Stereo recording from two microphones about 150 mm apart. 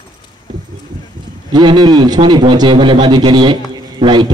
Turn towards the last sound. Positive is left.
turn(degrees=-30)  # may be behind; listen again after turning